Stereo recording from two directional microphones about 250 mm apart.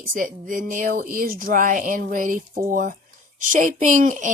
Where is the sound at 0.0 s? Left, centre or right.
Right.